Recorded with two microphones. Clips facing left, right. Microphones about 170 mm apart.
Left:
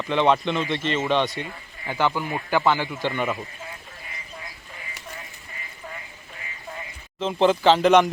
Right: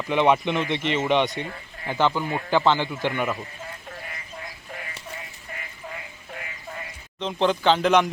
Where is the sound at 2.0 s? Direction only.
10° left (ahead or behind).